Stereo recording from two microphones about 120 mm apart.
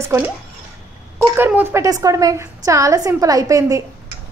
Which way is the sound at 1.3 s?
20° right (ahead or behind).